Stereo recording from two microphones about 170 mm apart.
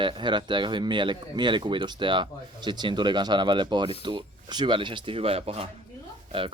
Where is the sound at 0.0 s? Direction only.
25° right (ahead or behind).